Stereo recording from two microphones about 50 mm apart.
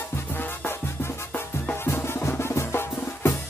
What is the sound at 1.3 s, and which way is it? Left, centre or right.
Music, left.